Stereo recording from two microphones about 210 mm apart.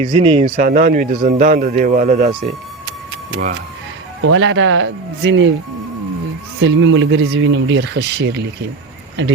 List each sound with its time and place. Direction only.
0.0 s speech: 25° right (ahead or behind); by 2.3 s 40° right (ahead or behind)
4.2 s speech: 65° right (ahead or behind)
6.6 s speech: 65° right (ahead or behind)